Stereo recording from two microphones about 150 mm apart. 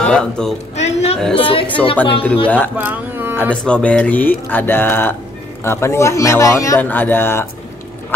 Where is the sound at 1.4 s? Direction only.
35° left (ahead or behind).